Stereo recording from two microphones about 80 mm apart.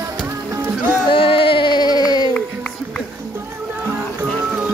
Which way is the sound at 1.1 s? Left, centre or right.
Left.